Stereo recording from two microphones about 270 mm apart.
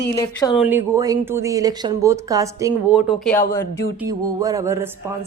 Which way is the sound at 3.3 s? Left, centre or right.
Centre.